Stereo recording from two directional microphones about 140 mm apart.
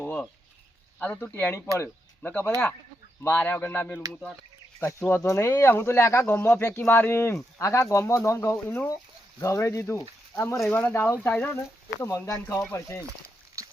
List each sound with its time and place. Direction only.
0.0 s a sound: 10° left (ahead or behind)
0.9 s speech: 10° left (ahead or behind)
4.1 s speech: 5° left (ahead or behind)
4.8 s speech: 15° left (ahead or behind)
13.6 s boat: 20° right (ahead or behind)